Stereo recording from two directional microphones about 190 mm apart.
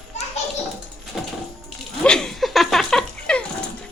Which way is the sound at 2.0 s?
5° left (ahead or behind).